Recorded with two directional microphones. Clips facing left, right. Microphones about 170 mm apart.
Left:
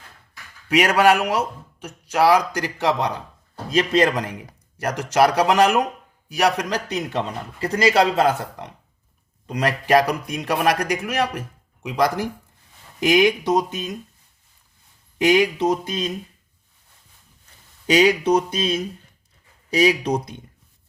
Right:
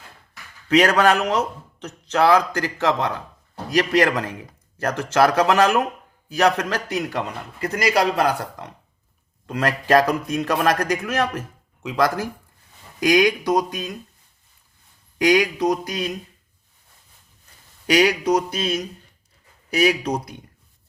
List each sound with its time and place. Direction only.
0.7 s a man's voice: 10° left (ahead or behind)
15.2 s a man's voice: 20° left (ahead or behind)
17.8 s a man's voice: 25° left (ahead or behind)